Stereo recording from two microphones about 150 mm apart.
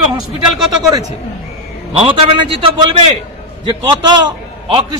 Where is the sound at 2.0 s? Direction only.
35° right (ahead or behind).